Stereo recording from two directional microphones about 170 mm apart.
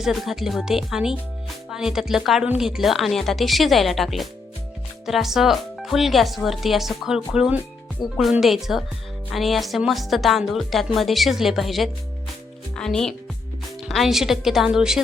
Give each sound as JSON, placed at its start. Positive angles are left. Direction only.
{"t": 0.0, "sound": "speech", "side_deg": 0}